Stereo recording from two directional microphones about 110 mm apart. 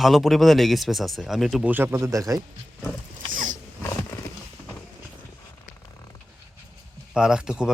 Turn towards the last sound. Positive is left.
turn(degrees=-5)  # may be behind; listen again after turning